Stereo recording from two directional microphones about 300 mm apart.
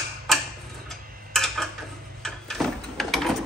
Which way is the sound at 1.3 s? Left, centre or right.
Centre.